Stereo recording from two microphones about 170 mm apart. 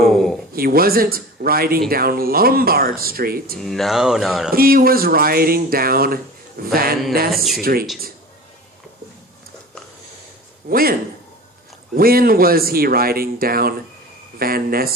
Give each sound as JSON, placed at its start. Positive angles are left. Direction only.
{"t": 0.0, "sound": "a sound", "side_deg": 0}
{"t": 0.5, "sound": "speech", "side_deg": -60}
{"t": 3.6, "sound": "speech", "side_deg": 0}
{"t": 4.5, "sound": "speech", "side_deg": -60}
{"t": 7.3, "sound": "speech", "side_deg": 0}
{"t": 7.6, "sound": "speech", "side_deg": -60}
{"t": 10.7, "sound": "speech", "side_deg": -60}
{"t": 11.9, "sound": "speech", "side_deg": -60}